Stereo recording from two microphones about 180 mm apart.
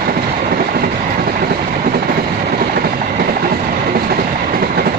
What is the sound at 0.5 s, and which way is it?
Vehicle, 55° right (ahead or behind).